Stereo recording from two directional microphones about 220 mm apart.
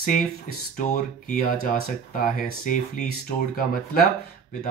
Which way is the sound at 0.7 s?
35° left (ahead or behind).